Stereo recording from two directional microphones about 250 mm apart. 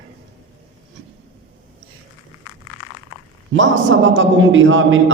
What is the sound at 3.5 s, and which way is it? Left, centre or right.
A man's voice, right.